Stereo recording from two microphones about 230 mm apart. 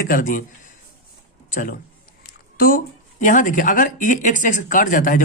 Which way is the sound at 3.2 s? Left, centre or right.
Left.